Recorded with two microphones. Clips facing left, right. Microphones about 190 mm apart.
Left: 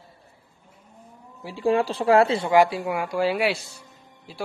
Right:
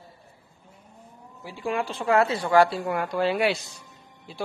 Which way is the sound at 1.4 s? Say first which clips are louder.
Left 7 dB; 35° left (ahead or behind).